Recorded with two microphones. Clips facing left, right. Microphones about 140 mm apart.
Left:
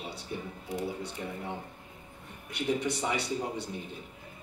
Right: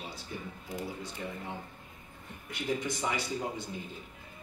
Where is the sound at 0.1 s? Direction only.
65° left (ahead or behind).